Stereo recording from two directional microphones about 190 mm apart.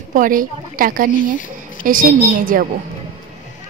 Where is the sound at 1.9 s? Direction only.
45° right (ahead or behind).